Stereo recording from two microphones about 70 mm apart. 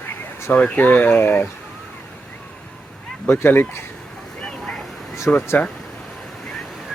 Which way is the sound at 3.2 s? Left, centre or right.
Left.